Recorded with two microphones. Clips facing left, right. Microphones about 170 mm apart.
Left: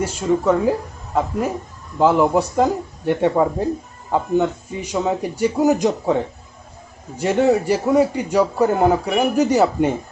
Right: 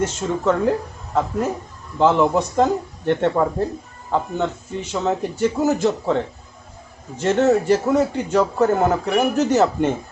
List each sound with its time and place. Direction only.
0.0 s a man's voice: 10° left (ahead or behind)